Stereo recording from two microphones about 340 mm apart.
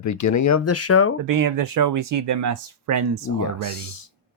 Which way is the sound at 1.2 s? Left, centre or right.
Right.